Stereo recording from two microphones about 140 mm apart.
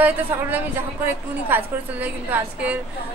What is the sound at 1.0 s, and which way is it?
A woman's voice, 15° right (ahead or behind).